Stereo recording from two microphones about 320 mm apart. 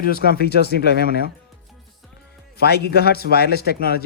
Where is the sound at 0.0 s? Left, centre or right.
Left.